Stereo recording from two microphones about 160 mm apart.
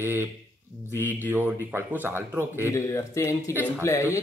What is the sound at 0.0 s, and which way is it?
Speech, 15° right (ahead or behind).